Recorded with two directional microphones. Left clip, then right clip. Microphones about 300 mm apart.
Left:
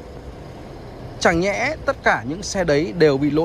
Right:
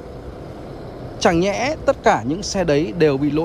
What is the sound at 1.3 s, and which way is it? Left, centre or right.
Speech, centre.